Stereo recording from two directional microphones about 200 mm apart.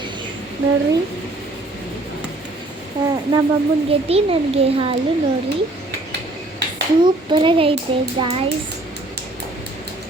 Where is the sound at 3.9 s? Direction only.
30° right (ahead or behind).